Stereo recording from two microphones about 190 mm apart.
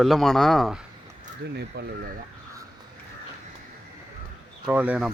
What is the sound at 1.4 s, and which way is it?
Speech, 60° right (ahead or behind).